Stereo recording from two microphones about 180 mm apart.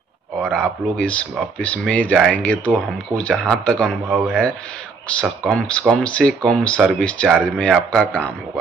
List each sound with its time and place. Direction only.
0.4 s speech: 5° left (ahead or behind)